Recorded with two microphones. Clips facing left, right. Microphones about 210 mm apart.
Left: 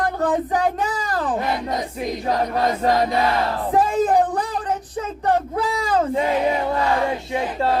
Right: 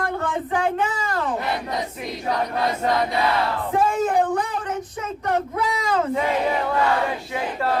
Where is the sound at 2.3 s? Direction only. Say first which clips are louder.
Left 2 dB; 45° left (ahead or behind).